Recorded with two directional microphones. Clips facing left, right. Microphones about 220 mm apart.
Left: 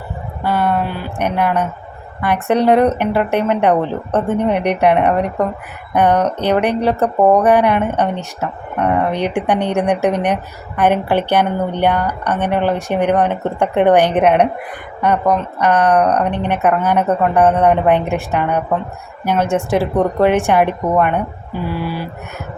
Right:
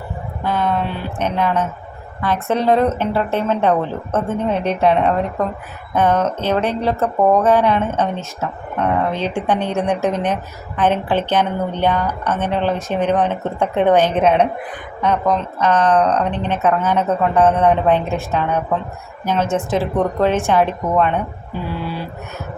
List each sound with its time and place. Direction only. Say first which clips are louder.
0.4 s speech: left 2 dB; 10° left (ahead or behind)